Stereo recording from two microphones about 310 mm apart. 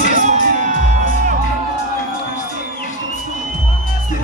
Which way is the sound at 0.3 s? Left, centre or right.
Right.